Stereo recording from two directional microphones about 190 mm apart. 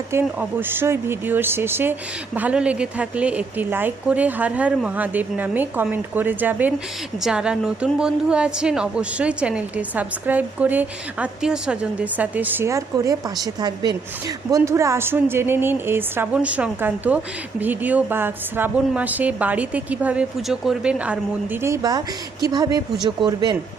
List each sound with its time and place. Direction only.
0.1 s a woman's voice: 10° right (ahead or behind)